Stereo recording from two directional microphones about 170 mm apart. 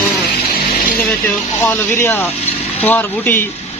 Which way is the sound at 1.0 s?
10° left (ahead or behind).